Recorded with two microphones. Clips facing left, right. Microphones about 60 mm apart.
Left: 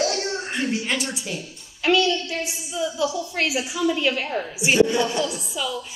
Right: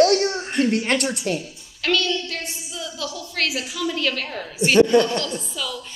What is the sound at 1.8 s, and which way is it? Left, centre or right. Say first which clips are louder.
A woman's voice: left 3 dB; centre.